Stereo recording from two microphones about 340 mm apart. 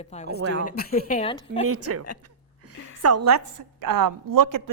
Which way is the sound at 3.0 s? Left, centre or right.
Right.